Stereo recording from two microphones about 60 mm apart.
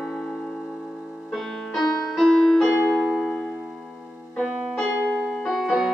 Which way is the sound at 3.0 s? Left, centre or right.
Centre.